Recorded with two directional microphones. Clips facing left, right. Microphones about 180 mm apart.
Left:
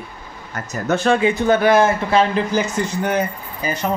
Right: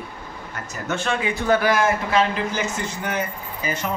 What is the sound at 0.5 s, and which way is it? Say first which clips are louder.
Speech: left 7 dB; 40° left (ahead or behind).